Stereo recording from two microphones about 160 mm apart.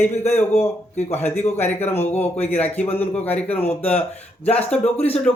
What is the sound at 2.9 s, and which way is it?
Speech, 10° left (ahead or behind).